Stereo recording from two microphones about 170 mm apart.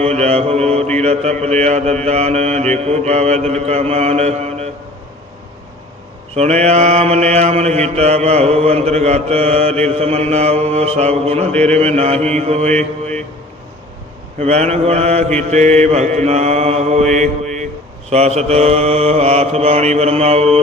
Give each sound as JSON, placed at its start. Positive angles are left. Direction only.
{"t": 0.0, "sound": "mantra", "side_deg": -40}
{"t": 6.3, "sound": "mantra", "side_deg": -40}
{"t": 12.7, "sound": "mantra", "side_deg": 5}
{"t": 14.3, "sound": "mantra", "side_deg": -40}